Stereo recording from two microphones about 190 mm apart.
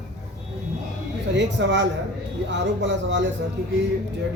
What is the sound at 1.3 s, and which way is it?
Speech, 70° right (ahead or behind).